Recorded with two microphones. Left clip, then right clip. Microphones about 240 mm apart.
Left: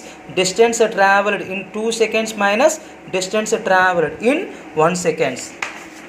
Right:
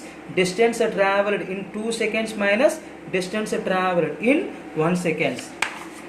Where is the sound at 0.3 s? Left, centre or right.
Centre.